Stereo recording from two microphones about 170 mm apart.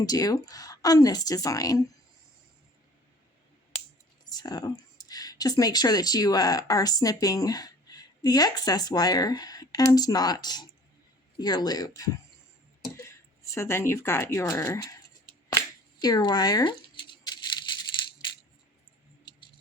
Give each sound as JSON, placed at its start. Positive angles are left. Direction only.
{"t": 0.0, "sound": "a woman's voice", "side_deg": 20}
{"t": 4.3, "sound": "a woman's voice", "side_deg": 20}
{"t": 16.0, "sound": "scissors", "side_deg": 25}